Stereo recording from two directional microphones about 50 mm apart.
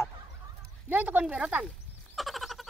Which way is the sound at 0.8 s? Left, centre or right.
Right.